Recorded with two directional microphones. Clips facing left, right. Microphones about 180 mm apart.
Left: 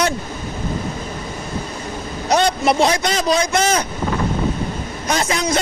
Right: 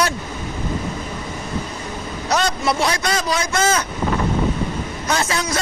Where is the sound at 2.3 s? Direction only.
25° left (ahead or behind).